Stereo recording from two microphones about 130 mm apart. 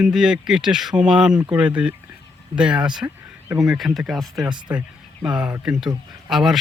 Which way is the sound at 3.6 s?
Centre (ahead or behind).